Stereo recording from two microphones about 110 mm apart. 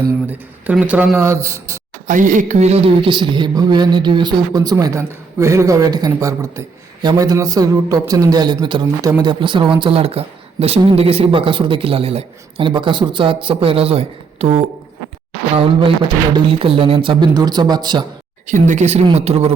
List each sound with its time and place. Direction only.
0.3 s speech: 15° right (ahead or behind)
1.2 s a man's voice: 25° right (ahead or behind)
2.5 s speech: 85° right
15.5 s speech: 55° right (ahead or behind)
17.3 s speech: 40° right (ahead or behind)
18.6 s speech: 85° right
19.1 s speech: 75° right (ahead or behind)